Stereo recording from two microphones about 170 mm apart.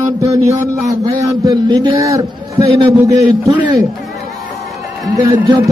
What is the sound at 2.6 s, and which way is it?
Speech, 35° right (ahead or behind).